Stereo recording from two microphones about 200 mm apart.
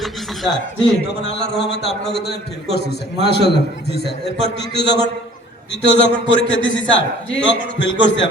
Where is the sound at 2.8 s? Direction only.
55° left (ahead or behind).